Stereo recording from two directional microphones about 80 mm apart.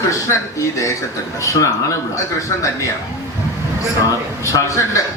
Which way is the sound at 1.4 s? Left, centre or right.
Left.